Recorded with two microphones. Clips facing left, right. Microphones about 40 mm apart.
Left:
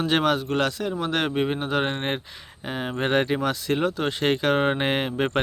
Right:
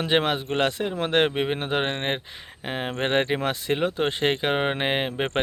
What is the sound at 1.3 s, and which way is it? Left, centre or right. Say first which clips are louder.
Speech: left 1 dB; right.